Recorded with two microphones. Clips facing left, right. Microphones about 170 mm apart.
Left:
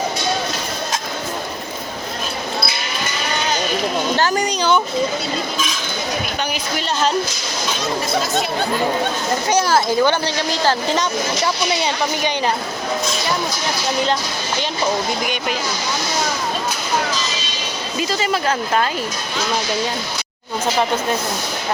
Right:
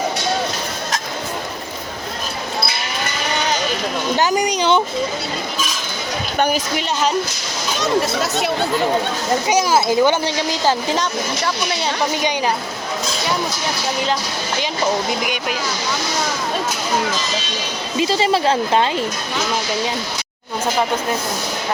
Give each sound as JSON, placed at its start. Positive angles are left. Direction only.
{"t": 4.2, "sound": "speech", "side_deg": -15}
{"t": 9.5, "sound": "speech", "side_deg": -15}
{"t": 18.0, "sound": "speech", "side_deg": -30}